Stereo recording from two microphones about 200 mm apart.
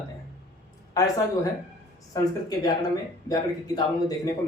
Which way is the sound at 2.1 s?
20° left (ahead or behind).